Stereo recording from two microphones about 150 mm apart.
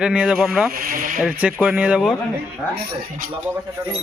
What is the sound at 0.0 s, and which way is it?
Speech, 5° right (ahead or behind).